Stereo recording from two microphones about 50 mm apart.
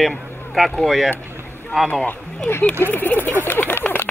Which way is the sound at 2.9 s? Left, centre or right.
Left.